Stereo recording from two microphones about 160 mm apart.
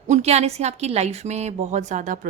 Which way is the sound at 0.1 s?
45° right (ahead or behind).